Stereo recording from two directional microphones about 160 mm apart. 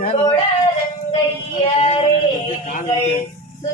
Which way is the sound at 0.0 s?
40° left (ahead or behind).